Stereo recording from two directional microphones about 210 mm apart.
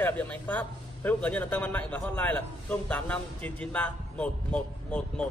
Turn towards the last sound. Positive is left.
turn(degrees=5)  # may be behind; listen again after turning